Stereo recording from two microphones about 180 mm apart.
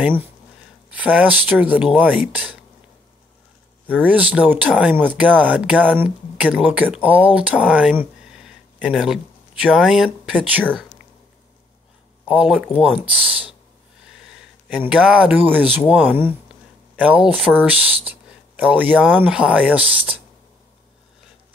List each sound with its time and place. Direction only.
0.0 s speech: 10° right (ahead or behind)
3.8 s speech: 10° right (ahead or behind)
12.3 s speech: 5° right (ahead or behind)
16.2 s speech: 10° right (ahead or behind)